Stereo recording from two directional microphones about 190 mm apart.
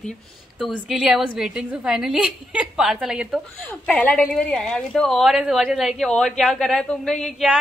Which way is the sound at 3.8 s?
5° left (ahead or behind).